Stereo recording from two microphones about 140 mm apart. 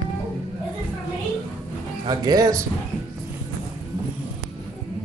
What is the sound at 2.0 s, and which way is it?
Speech, 30° right (ahead or behind).